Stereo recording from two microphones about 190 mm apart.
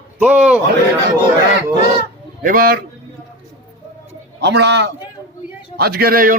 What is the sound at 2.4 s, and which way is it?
Speech, 50° right (ahead or behind).